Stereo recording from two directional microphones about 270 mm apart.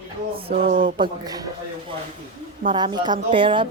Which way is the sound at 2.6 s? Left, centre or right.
Centre.